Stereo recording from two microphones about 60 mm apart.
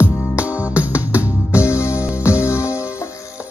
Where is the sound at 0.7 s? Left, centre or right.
Right.